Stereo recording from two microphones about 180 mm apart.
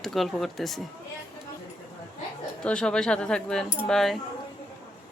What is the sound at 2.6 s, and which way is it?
Speech, 5° left (ahead or behind).